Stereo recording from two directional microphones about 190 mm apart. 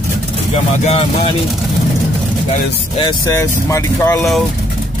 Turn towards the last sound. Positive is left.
turn(degrees=15)  # may be behind; listen again after turning